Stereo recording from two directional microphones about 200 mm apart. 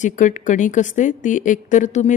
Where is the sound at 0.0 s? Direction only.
40° left (ahead or behind).